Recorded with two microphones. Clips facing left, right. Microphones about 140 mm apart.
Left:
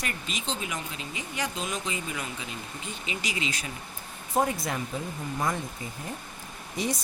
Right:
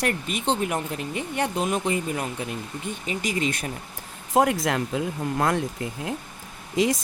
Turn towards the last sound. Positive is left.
turn(degrees=-90)